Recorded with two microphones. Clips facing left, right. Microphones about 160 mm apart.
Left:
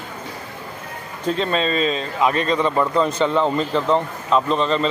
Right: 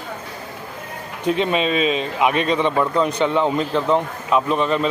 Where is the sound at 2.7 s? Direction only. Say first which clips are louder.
Even; centre (ahead or behind).